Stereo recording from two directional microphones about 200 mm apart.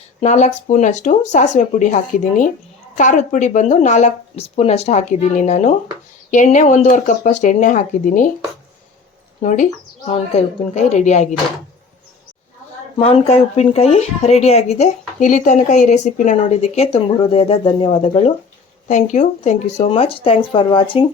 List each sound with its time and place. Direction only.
0.2 s speech: 35° left (ahead or behind)
9.4 s speech: 40° left (ahead or behind)
13.0 s speech: 30° left (ahead or behind)